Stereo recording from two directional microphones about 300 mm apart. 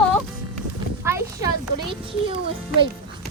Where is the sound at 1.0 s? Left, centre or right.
Centre.